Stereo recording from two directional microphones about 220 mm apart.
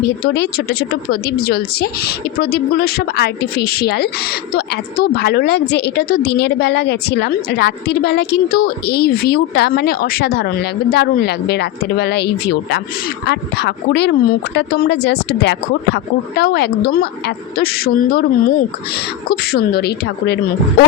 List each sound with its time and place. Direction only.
0.3 s a woman's voice: 50° left (ahead or behind)